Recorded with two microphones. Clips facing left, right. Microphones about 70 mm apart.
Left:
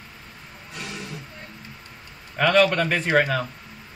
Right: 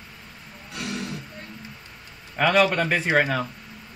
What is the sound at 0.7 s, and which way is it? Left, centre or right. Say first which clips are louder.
Music: right 4 dB; right.